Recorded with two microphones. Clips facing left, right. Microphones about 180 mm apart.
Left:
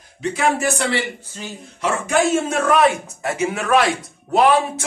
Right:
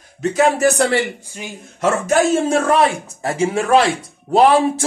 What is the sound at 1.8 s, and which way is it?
Speech, 40° right (ahead or behind).